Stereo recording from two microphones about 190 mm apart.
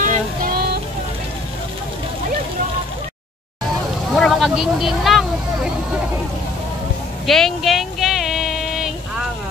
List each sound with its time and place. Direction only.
0.0 s child singing: 45° right (ahead or behind)
4.1 s speech: centre (ahead or behind)
7.2 s a sound: centre (ahead or behind)